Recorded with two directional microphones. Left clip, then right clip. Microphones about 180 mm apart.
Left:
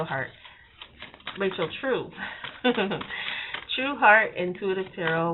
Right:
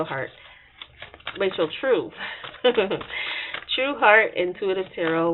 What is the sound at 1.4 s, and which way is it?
Speech, 45° right (ahead or behind).